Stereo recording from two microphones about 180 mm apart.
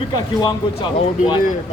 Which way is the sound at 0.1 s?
25° left (ahead or behind).